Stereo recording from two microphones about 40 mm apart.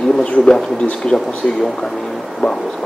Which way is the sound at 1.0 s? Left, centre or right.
Centre.